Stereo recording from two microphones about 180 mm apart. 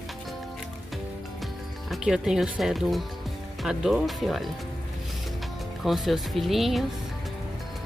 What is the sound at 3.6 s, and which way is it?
Speech, centre (ahead or behind).